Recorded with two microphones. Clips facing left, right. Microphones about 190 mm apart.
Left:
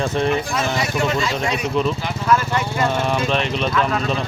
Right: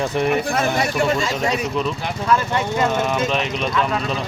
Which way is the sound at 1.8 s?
Centre (ahead or behind).